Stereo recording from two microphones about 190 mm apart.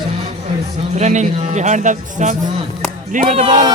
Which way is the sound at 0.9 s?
40° right (ahead or behind).